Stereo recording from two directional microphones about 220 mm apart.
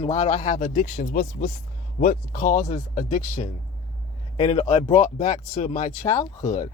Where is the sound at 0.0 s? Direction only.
30° left (ahead or behind).